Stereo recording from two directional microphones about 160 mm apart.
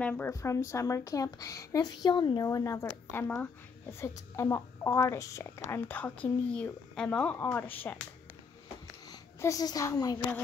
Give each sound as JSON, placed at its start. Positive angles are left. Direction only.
{"t": 0.0, "sound": "a woman's voice", "side_deg": 15}
{"t": 9.1, "sound": "a child's voice", "side_deg": 20}